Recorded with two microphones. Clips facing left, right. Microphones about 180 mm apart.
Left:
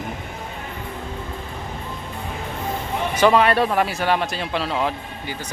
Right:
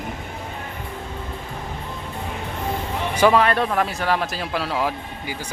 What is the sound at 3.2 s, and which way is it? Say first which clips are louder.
Speech: left 1 dB; centre (ahead or behind).